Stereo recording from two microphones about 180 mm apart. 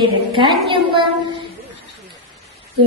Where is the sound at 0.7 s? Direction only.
25° right (ahead or behind).